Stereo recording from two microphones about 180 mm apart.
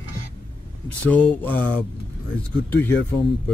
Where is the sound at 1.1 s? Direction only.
10° left (ahead or behind).